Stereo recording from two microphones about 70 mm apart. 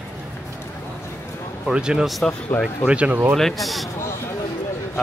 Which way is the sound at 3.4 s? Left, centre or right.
Centre.